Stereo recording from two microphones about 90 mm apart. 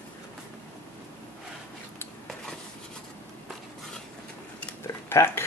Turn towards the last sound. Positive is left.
turn(degrees=25)  # may be behind; listen again after turning